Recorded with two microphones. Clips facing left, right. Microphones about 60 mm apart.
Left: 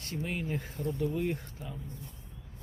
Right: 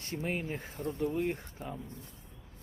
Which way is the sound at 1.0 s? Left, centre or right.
Centre.